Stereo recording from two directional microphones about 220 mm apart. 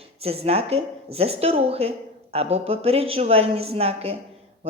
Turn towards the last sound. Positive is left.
turn(degrees=-25)  # may be behind; listen again after turning